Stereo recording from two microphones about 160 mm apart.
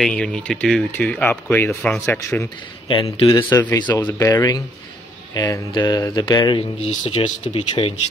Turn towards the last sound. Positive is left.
turn(degrees=35)  # may be behind; listen again after turning